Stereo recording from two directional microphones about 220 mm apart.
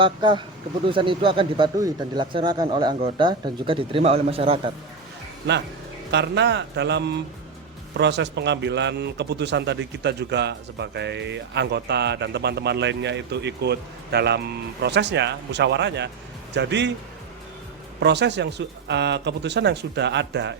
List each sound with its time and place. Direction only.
0.0 s speech: 20° right (ahead or behind)
6.1 s a man's voice: 50° right (ahead or behind)
18.0 s a man's voice: 50° right (ahead or behind)